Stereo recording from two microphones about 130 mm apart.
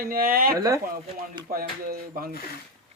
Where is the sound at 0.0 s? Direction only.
90° right.